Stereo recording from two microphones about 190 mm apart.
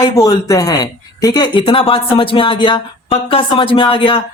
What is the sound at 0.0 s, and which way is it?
Speech, 20° left (ahead or behind).